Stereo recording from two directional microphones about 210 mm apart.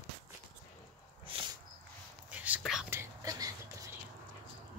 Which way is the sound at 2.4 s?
5° right (ahead or behind).